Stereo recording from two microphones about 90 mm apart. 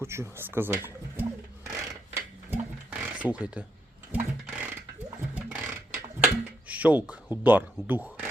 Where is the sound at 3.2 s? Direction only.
15° right (ahead or behind).